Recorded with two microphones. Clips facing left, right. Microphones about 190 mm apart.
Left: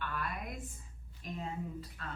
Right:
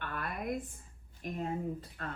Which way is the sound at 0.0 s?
50° right (ahead or behind).